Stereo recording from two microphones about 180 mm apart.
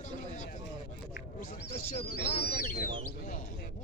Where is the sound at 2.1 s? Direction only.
60° left (ahead or behind).